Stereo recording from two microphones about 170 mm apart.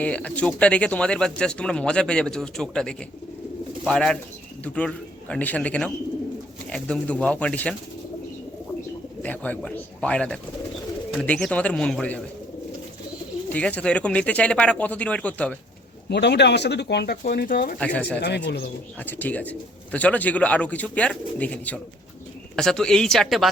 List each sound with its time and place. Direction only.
0.0 s speech: 5° left (ahead or behind)
9.2 s speech: 10° left (ahead or behind)
13.5 s speech: 10° left (ahead or behind)
16.0 s speech: 80° left; by 17.7 s 55° left (ahead or behind)
17.7 s speech: 5° left (ahead or behind)
18.2 s speech: 85° left
18.9 s speech: 10° left (ahead or behind)